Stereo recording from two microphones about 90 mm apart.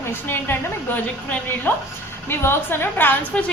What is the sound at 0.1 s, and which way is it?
A woman's voice, 25° left (ahead or behind).